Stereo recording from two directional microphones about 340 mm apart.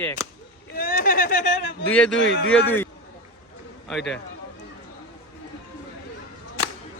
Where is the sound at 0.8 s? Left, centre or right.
Left.